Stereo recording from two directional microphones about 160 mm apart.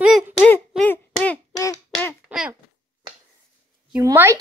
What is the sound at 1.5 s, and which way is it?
Quack, 20° left (ahead or behind).